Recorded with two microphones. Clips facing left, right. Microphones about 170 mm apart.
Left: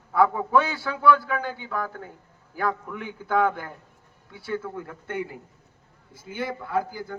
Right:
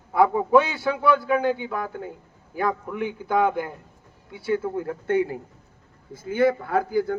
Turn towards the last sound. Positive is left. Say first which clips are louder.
# right 5 dB
turn(degrees=-60)  # may be behind; listen again after turning